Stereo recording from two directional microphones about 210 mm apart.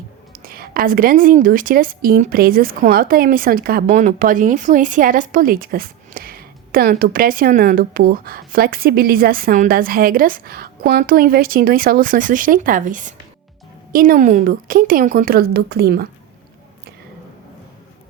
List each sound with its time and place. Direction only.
0.3 s a woman's voice: 45° right (ahead or behind)